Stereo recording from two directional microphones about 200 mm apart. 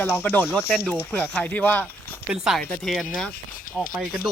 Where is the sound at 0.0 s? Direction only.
10° left (ahead or behind).